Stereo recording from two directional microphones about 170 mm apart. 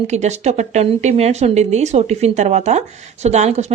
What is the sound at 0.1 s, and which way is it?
Speech, 45° right (ahead or behind).